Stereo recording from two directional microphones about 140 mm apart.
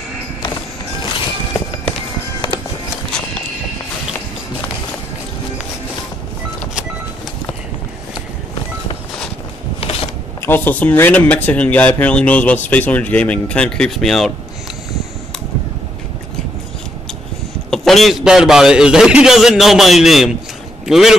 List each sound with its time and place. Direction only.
1.0 s music: 35° left (ahead or behind)
10.4 s speech: 15° left (ahead or behind)
17.6 s a man's voice: centre (ahead or behind)